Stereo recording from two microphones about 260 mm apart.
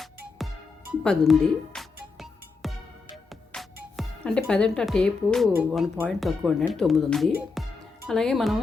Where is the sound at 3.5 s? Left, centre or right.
Centre.